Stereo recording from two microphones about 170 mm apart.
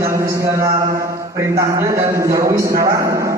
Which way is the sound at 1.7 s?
15° right (ahead or behind).